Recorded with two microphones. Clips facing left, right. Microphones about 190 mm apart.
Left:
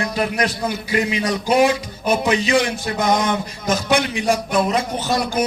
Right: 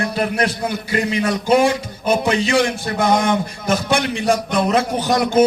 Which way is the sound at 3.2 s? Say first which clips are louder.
Right 2 dB; 55° right (ahead or behind).